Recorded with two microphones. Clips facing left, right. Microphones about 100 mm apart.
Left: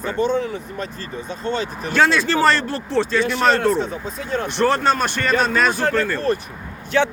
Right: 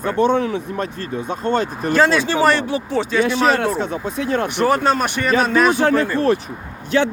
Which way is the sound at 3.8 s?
70° right (ahead or behind).